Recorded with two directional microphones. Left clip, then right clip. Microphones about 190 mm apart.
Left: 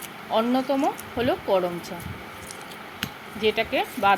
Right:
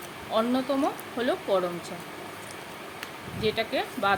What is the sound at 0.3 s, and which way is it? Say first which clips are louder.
A woman's voice: left 3 dB; 15° left (ahead or behind).